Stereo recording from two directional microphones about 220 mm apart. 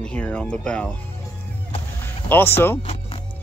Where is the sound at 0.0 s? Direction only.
5° left (ahead or behind).